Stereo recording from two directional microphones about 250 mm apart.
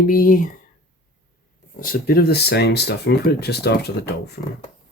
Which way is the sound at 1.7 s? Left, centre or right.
Left.